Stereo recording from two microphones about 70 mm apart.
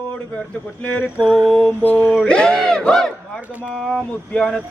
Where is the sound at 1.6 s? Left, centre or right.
Left.